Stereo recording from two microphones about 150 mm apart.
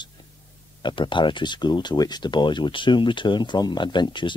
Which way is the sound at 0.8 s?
35° left (ahead or behind).